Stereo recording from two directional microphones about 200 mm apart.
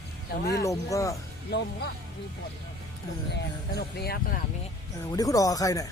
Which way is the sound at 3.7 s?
50° left (ahead or behind).